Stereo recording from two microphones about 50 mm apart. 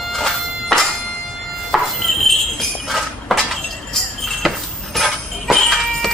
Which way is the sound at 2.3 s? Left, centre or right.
Centre.